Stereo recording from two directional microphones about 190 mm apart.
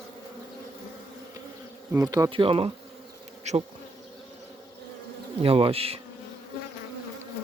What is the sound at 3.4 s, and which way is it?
Bee, 35° right (ahead or behind).